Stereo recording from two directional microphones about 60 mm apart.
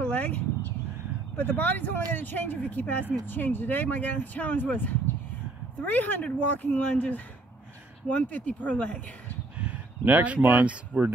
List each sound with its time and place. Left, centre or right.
0.0 s a sound: left
1.3 s speech: left
9.6 s speech: right